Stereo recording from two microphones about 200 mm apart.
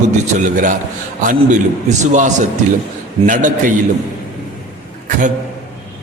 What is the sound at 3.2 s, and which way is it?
Speech, 40° right (ahead or behind).